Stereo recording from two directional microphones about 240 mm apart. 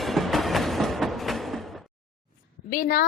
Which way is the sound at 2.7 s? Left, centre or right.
Left.